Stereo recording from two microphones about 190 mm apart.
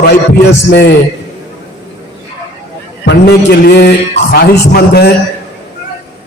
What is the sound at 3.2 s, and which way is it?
A man's voice, 60° left (ahead or behind).